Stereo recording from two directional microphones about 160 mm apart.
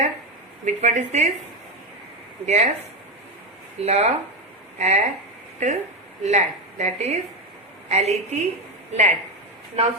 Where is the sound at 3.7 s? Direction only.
40° right (ahead or behind).